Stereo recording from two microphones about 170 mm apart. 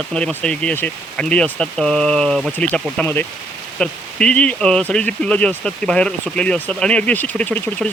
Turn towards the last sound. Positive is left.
turn(degrees=10)  # may be behind; listen again after turning